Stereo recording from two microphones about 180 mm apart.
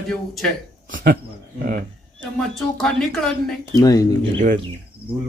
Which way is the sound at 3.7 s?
20° left (ahead or behind).